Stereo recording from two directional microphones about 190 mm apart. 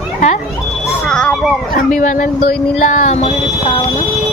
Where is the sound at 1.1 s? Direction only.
5° left (ahead or behind).